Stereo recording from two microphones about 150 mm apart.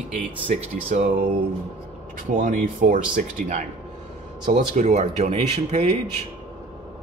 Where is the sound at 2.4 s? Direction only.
65° right (ahead or behind).